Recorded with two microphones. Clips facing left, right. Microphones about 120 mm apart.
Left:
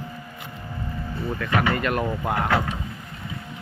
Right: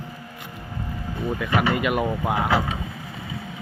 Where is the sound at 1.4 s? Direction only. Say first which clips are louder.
Right 1 dB; 10° right (ahead or behind).